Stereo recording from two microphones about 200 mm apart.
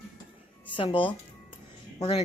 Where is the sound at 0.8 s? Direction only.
25° left (ahead or behind).